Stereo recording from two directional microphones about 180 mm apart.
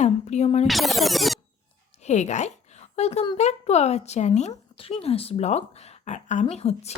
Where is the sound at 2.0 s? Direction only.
40° left (ahead or behind).